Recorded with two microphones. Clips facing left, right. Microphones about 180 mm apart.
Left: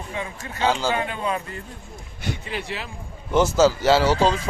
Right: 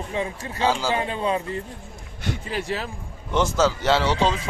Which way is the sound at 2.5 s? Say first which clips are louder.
Right 6 dB; 45° right (ahead or behind).